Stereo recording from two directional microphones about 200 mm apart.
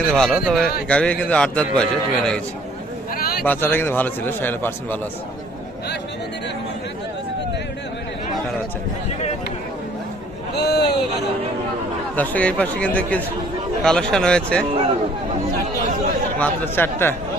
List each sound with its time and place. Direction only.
0.0 s a man's voice: 5° left (ahead or behind)
3.4 s speech: 10° left (ahead or behind)
10.5 s a sound: 55° left (ahead or behind)
12.1 s a man's voice: 10° left (ahead or behind)
16.4 s speech: 10° left (ahead or behind)